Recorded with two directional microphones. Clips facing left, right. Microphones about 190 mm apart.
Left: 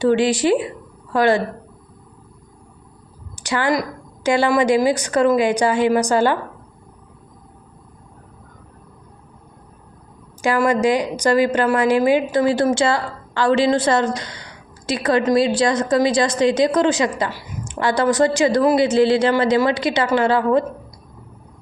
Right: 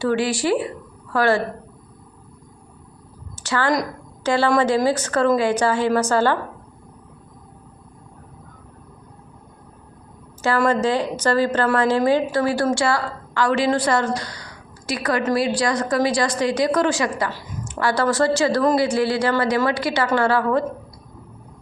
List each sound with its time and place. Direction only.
0.0 s a woman's voice: 20° left (ahead or behind)
3.3 s a sound: 15° left (ahead or behind)
4.2 s a woman's voice: 15° left (ahead or behind)
10.7 s a woman's voice: 15° left (ahead or behind)